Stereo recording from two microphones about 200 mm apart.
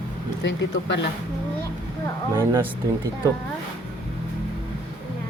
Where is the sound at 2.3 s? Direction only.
10° right (ahead or behind).